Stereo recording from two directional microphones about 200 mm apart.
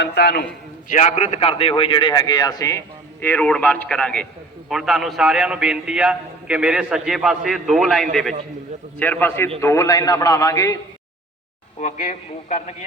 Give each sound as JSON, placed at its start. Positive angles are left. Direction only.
{"t": 0.0, "sound": "a man's voice", "side_deg": 55}
{"t": 0.9, "sound": "a man's voice", "side_deg": 40}
{"t": 9.0, "sound": "a man's voice", "side_deg": 10}
{"t": 11.8, "sound": "a man's voice", "side_deg": 40}